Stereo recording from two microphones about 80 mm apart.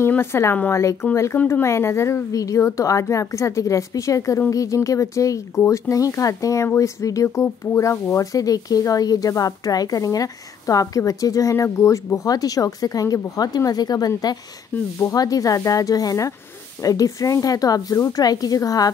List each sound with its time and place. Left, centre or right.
0.2 s a woman's voice: left